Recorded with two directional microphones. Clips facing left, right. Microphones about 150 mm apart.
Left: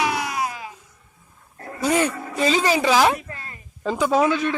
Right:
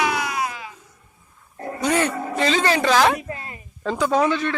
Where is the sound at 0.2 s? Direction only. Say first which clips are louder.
Even; 35° left (ahead or behind).